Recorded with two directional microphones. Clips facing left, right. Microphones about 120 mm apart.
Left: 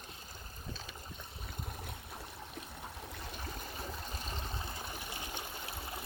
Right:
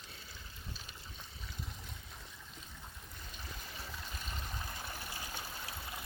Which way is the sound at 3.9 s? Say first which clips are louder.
Left 3 dB; 40° left (ahead or behind).